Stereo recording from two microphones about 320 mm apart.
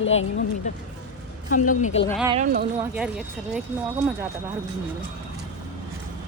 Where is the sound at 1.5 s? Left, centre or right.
Left.